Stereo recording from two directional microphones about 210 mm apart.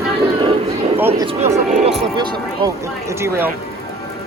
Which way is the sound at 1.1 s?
25° right (ahead or behind).